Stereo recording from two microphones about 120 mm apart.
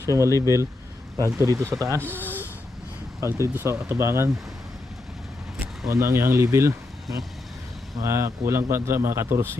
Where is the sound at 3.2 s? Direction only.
25° right (ahead or behind).